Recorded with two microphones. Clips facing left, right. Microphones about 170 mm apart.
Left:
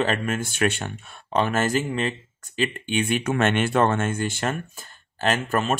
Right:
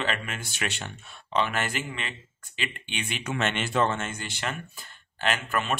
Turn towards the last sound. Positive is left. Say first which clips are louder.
# left 5 dB
turn(degrees=40)  # may be behind; listen again after turning